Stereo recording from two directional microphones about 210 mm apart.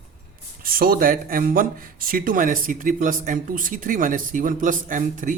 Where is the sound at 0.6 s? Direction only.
45° right (ahead or behind).